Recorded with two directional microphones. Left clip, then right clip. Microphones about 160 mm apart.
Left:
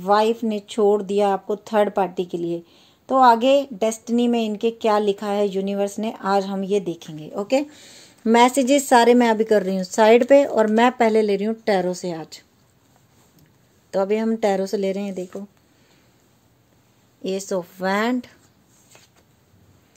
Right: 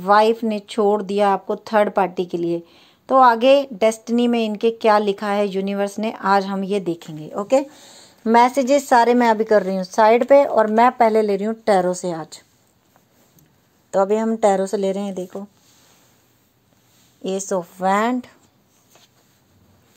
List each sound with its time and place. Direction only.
0.0 s speech: 10° right (ahead or behind)
7.7 s a woman's voice: 10° left (ahead or behind)
13.8 s a woman's voice: centre (ahead or behind)
17.2 s a woman's voice: centre (ahead or behind)